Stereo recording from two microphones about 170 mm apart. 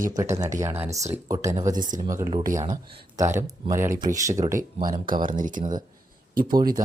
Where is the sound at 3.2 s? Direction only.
15° right (ahead or behind).